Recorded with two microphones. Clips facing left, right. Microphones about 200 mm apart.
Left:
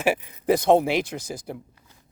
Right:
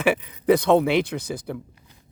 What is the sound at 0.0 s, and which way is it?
Speech, 60° right (ahead or behind).